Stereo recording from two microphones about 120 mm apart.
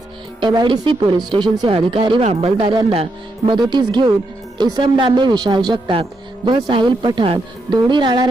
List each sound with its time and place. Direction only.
0.3 s speech: 40° right (ahead or behind)
2.2 s speech: 55° right (ahead or behind); by 8.3 s 40° right (ahead or behind)